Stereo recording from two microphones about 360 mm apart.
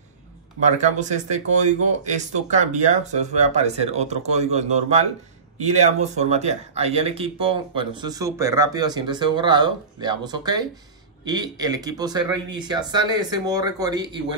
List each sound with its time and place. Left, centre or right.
0.7 s speech: centre